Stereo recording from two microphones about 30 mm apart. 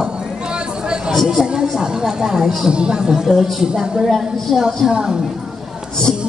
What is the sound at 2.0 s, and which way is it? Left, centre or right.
Speech, centre.